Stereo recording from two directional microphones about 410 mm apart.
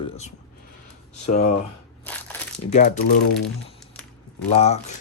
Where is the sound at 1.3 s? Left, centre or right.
Centre.